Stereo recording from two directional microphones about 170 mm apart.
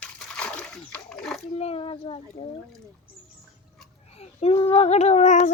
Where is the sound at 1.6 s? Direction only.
35° left (ahead or behind).